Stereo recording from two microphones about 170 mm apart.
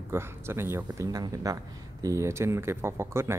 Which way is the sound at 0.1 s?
15° right (ahead or behind).